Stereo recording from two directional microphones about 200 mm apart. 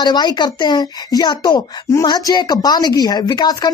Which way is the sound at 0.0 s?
20° left (ahead or behind).